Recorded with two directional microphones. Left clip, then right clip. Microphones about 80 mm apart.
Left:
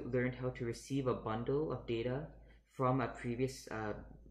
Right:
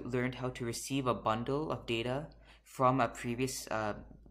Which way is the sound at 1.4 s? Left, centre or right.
Right.